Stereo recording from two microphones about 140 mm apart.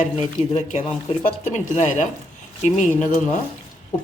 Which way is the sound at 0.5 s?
60° left (ahead or behind).